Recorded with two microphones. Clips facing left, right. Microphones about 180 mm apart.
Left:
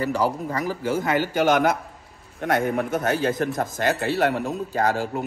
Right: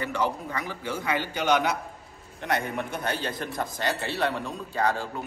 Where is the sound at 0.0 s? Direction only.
40° left (ahead or behind).